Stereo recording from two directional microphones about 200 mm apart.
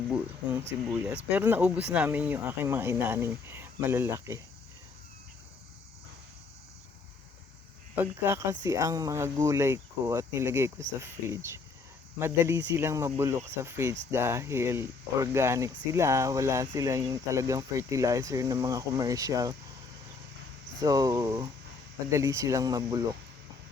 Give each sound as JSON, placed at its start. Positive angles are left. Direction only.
{"t": 0.9, "sound": "speech", "side_deg": -5}
{"t": 7.9, "sound": "speech", "side_deg": -10}
{"t": 20.7, "sound": "speech", "side_deg": -20}